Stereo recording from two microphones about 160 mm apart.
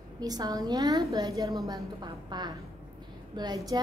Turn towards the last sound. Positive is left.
turn(degrees=-25)  # may be behind; listen again after turning